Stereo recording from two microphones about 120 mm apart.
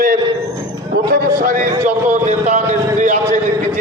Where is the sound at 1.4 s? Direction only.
90° right.